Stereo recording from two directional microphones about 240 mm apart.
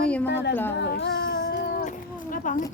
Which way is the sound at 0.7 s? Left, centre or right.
Left.